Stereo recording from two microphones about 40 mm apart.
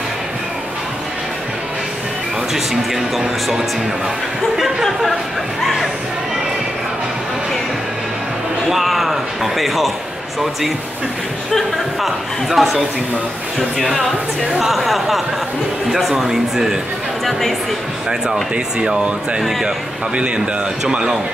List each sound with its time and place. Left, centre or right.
2.5 s speech: centre
8.6 s speech: centre
11.5 s speech: centre
17.2 s speech: centre
18.3 s speech: centre
20.9 s speech: centre